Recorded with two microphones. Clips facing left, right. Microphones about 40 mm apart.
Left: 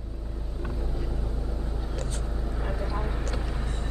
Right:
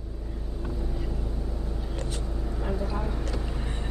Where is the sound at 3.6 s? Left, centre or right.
Centre.